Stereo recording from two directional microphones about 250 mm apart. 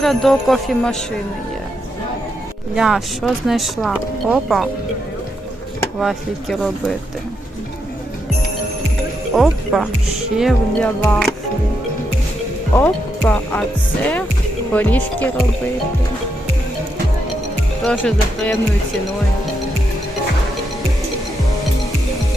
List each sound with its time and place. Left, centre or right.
0.0 s speech: centre
2.7 s speech: centre
6.0 s speech: centre
9.3 s speech: centre
12.7 s speech: centre
17.8 s speech: centre